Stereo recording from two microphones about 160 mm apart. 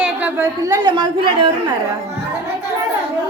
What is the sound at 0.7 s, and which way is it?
Speech, 25° right (ahead or behind).